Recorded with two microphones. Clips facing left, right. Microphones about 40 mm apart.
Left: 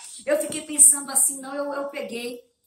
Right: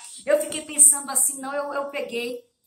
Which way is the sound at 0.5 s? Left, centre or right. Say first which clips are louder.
Even; right.